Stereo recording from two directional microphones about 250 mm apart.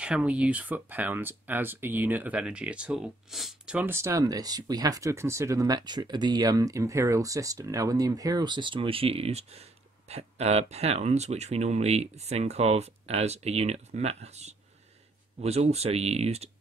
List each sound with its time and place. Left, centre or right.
0.0 s speech: centre; by 14.5 s right
15.7 s speech: right